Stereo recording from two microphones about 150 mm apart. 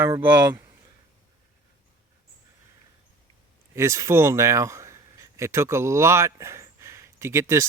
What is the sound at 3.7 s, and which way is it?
Speech, 20° right (ahead or behind).